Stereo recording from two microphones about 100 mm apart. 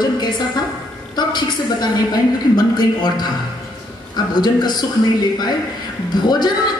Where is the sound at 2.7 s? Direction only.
45° left (ahead or behind).